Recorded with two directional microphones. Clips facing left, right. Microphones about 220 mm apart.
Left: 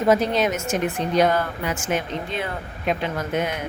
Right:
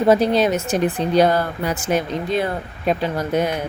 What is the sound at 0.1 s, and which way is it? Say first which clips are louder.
A woman's voice: right 4 dB; 35° right (ahead or behind).